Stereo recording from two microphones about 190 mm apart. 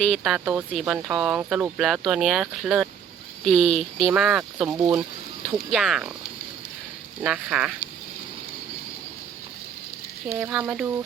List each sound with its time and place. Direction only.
0.0 s speech: centre (ahead or behind)
4.7 s speech: 20° right (ahead or behind)
5.7 s speech: centre (ahead or behind)
7.2 s speech: 5° right (ahead or behind)
10.2 s speech: 10° right (ahead or behind)